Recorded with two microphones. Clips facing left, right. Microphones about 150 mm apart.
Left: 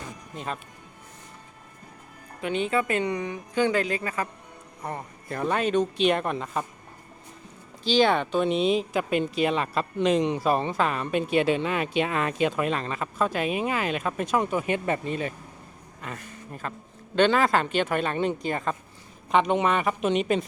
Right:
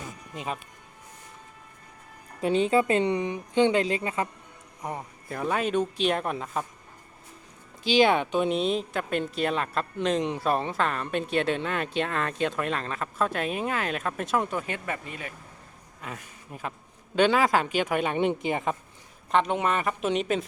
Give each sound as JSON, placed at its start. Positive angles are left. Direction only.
{"t": 0.3, "sound": "speech", "side_deg": -5}
{"t": 2.4, "sound": "speech", "side_deg": -30}
{"t": 4.8, "sound": "speech", "side_deg": -10}
{"t": 8.1, "sound": "speech", "side_deg": -10}
{"t": 14.7, "sound": "speech", "side_deg": 30}
{"t": 16.0, "sound": "speech", "side_deg": -5}
{"t": 19.3, "sound": "speech", "side_deg": 0}